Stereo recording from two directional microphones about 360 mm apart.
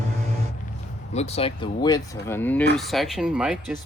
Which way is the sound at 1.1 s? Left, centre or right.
Centre.